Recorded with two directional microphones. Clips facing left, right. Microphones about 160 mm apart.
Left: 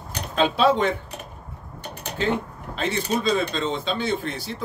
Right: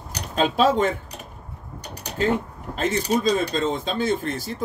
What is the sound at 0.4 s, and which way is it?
Speech, 45° right (ahead or behind).